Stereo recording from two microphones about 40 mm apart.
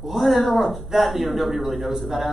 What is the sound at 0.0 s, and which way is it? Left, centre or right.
A man's voice, centre.